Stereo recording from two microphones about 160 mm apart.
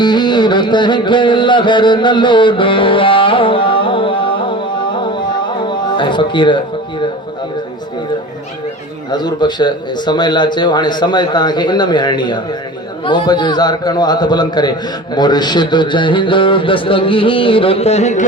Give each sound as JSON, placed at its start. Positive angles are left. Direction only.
{"t": 0.0, "sound": "music", "side_deg": 25}
{"t": 9.1, "sound": "a man's voice", "side_deg": 25}